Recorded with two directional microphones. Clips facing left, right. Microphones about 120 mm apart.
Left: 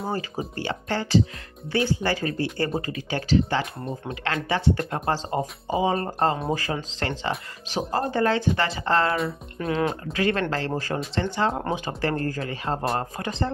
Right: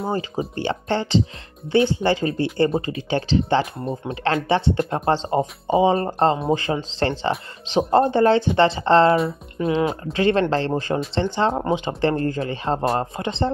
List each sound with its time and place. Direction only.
0.1 s speech: 25° right (ahead or behind)
9.6 s speech: 15° right (ahead or behind)
10.1 s speech: 30° right (ahead or behind)